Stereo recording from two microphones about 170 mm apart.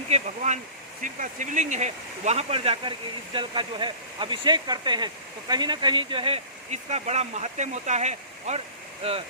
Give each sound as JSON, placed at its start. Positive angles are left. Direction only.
{"t": 0.1, "sound": "speech", "side_deg": -45}